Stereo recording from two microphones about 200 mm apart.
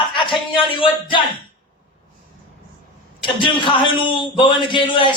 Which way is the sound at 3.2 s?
25° left (ahead or behind).